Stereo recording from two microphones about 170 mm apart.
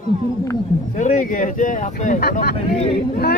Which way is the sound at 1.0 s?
50° left (ahead or behind).